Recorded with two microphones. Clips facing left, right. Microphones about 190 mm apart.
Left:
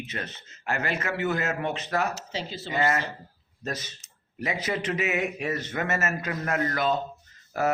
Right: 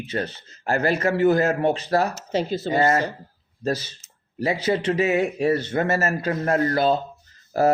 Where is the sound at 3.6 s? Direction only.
30° right (ahead or behind).